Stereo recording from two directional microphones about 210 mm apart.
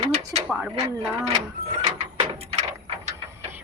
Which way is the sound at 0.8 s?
30° right (ahead or behind).